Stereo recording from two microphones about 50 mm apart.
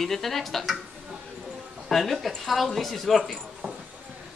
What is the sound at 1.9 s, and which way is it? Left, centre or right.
Speech, centre.